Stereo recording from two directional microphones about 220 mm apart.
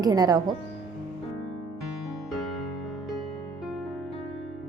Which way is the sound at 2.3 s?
Centre (ahead or behind).